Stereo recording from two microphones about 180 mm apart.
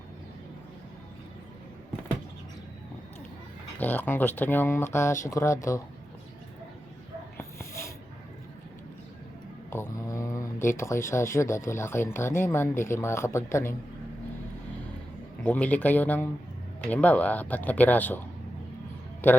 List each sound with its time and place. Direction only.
3.8 s speech: 10° left (ahead or behind)
7.3 s snort: 15° left (ahead or behind)
9.6 s speech: 15° left (ahead or behind)
15.4 s speech: 10° left (ahead or behind)